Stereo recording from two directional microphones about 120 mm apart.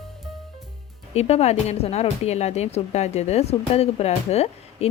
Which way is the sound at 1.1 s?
60° left (ahead or behind).